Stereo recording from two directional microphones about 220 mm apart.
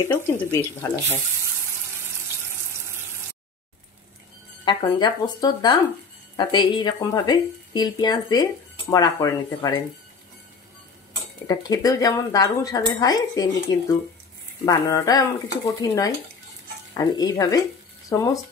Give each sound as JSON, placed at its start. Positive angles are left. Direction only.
{"t": 0.0, "sound": "speech", "side_deg": 10}
{"t": 4.6, "sound": "speech", "side_deg": 20}
{"t": 11.4, "sound": "speech", "side_deg": 15}